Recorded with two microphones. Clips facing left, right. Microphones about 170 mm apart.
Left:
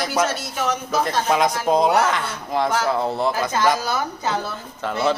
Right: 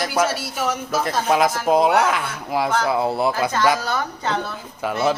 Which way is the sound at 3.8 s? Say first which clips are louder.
Even; 10° left (ahead or behind).